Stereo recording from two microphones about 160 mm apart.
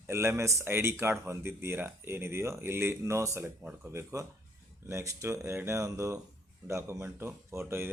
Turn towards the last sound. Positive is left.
turn(degrees=-15)  # may be behind; listen again after turning